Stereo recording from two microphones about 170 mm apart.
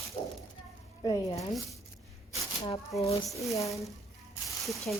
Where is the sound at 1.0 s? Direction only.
25° left (ahead or behind).